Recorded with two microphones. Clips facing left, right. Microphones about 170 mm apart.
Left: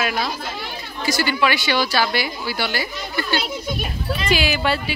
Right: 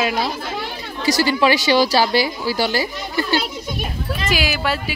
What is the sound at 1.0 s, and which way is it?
A woman's voice, 35° right (ahead or behind).